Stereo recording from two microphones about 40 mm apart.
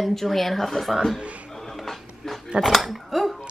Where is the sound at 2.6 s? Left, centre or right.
Centre.